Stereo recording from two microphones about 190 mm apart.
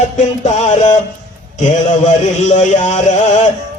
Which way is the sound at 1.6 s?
40° left (ahead or behind).